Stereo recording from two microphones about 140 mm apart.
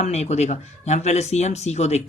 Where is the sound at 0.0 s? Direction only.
55° left (ahead or behind).